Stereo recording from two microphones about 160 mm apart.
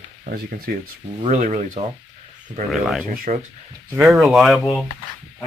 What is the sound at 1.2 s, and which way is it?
Speech, 45° right (ahead or behind).